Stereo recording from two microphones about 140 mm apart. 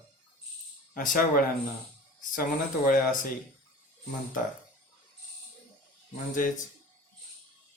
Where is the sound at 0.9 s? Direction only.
75° left (ahead or behind).